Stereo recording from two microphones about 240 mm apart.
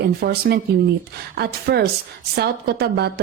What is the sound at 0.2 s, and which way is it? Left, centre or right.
A woman's voice, right.